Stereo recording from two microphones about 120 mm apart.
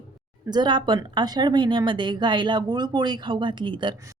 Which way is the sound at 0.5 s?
40° right (ahead or behind).